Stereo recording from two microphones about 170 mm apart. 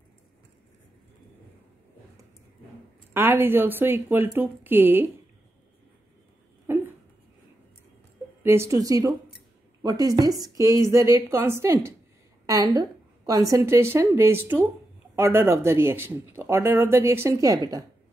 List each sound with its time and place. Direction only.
3.1 s speech: 10° right (ahead or behind)
6.7 s a sound: 15° right (ahead or behind)
8.4 s a woman's voice: 15° right (ahead or behind)